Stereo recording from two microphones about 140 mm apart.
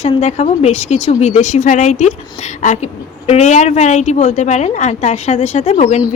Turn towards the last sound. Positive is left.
turn(degrees=55)  # may be behind; listen again after turning